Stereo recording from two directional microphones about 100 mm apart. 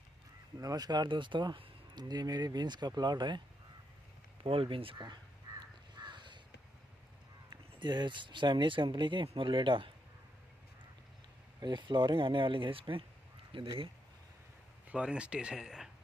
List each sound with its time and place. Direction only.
0.6 s speech: 40° right (ahead or behind)
4.4 s speech: 65° right (ahead or behind)
5.0 s crow: 45° right (ahead or behind)
7.8 s speech: 50° right (ahead or behind)
11.6 s speech: 50° right (ahead or behind)
14.9 s speech: 10° right (ahead or behind)